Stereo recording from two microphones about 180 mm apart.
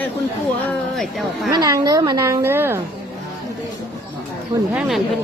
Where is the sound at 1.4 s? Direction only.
20° right (ahead or behind).